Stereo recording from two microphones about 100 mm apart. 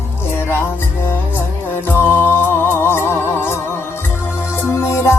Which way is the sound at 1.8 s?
20° left (ahead or behind).